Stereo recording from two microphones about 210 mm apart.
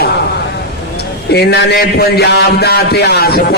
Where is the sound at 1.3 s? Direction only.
50° left (ahead or behind).